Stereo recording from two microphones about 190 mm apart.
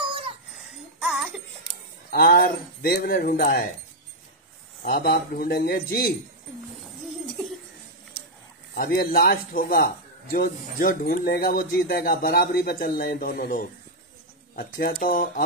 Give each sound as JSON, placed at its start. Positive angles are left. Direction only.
{"t": 0.9, "sound": "music", "side_deg": -5}
{"t": 2.0, "sound": "speech", "side_deg": 50}
{"t": 4.8, "sound": "speech", "side_deg": 55}
{"t": 8.7, "sound": "speech", "side_deg": 50}